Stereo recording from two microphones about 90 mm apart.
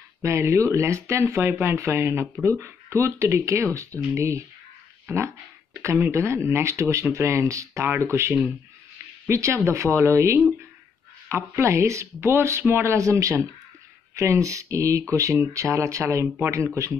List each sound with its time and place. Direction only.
0.2 s speech: 30° right (ahead or behind)
5.0 s a sound: 30° right (ahead or behind)
5.8 s speech: 30° right (ahead or behind)